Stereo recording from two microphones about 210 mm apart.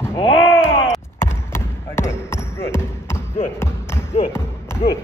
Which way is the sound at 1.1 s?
10° left (ahead or behind).